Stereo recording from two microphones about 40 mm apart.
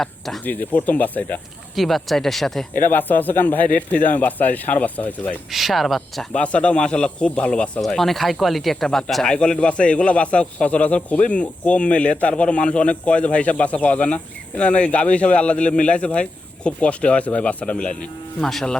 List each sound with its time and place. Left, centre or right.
0.0 s speech: centre
0.4 s speech: left
1.7 s speech: centre
2.8 s speech: left
5.5 s speech: centre
6.3 s a man's voice: left
7.9 s speech: centre
9.2 s a man's voice: left
18.4 s speech: centre